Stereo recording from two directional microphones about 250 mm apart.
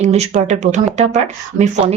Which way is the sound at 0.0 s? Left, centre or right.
Right.